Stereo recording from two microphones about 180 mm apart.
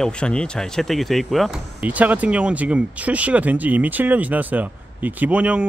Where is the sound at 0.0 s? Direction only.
5° left (ahead or behind).